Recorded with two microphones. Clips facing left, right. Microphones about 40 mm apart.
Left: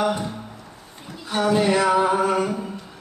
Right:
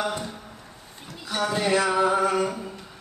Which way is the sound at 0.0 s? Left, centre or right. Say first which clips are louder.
Left 5 dB; centre.